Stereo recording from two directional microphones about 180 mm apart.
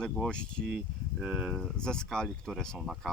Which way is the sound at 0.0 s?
5° left (ahead or behind).